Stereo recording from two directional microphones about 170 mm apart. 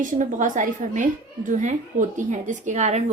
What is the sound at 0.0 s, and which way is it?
A woman's voice, 50° right (ahead or behind).